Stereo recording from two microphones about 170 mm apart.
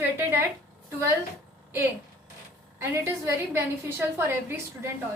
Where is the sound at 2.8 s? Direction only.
15° right (ahead or behind).